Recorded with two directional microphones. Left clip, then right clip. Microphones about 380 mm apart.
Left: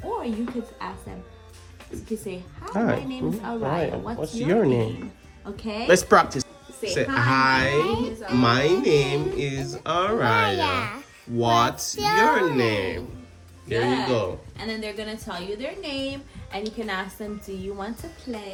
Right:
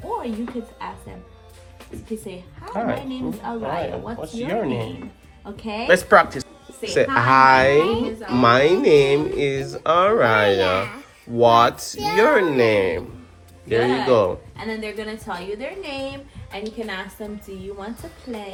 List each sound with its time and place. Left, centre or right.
0.0 s speech: centre
2.7 s speech: left
3.2 s speech: centre
4.2 s speech: left
5.6 s speech: centre
5.9 s speech: centre